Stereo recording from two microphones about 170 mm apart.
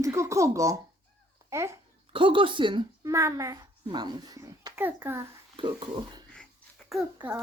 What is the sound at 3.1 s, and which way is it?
A child's voice, 20° right (ahead or behind).